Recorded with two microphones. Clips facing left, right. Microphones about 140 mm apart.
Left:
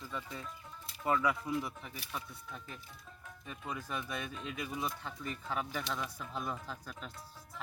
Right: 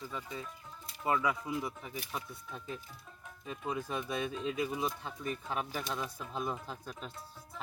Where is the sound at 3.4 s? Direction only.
25° right (ahead or behind).